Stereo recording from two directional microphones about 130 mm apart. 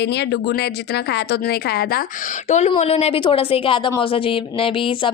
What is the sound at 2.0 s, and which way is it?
A woman's voice, 70° left (ahead or behind).